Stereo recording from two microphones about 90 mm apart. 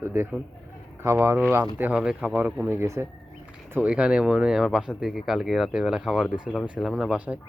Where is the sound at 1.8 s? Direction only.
10° right (ahead or behind).